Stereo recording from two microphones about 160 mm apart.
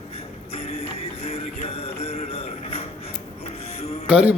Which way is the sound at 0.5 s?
40° left (ahead or behind).